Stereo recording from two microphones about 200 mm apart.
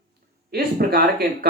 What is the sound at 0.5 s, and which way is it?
Speech, 50° right (ahead or behind).